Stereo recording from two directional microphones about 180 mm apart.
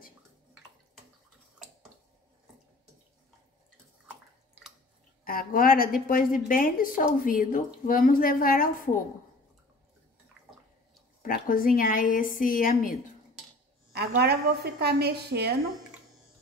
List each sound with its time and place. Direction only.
4.1 s bathtub: 5° right (ahead or behind)
5.2 s a woman's voice: 55° left (ahead or behind)
11.2 s a woman's voice: 55° left (ahead or behind)
13.9 s a woman's voice: 65° right (ahead or behind)